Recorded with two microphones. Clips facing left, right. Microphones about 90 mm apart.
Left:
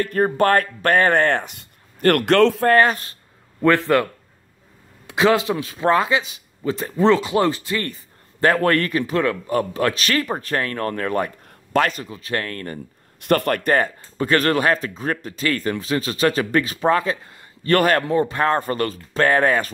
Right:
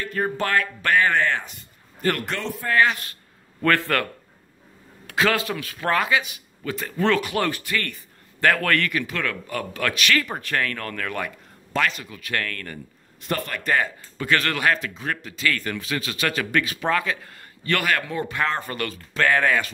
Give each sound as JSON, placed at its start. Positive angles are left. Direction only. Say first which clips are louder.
{"t": 0.0, "sound": "speech", "louder": "left 7 dB", "side_deg": 50}
{"t": 2.7, "sound": "speech", "louder": "left 5 dB", "side_deg": 45}
{"t": 3.6, "sound": "a man's voice", "louder": "left 5 dB", "side_deg": 20}
{"t": 13.2, "sound": "speech", "louder": "left 9 dB", "side_deg": 60}
{"t": 14.1, "sound": "speech", "louder": "left 6 dB", "side_deg": 35}